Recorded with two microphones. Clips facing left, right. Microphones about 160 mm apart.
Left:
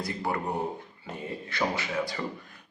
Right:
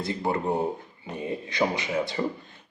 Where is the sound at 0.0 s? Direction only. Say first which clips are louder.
Right 4 dB; 25° right (ahead or behind).